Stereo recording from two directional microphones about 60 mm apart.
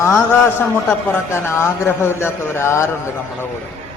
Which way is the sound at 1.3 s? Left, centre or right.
Left.